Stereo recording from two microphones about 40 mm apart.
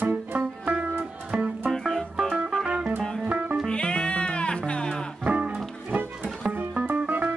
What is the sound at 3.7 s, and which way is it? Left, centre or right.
Music, left.